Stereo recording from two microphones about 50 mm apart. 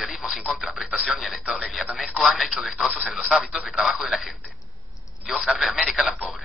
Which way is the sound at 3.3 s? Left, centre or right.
Centre.